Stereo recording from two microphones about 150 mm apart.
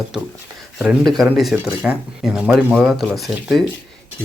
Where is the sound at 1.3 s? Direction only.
Centre (ahead or behind).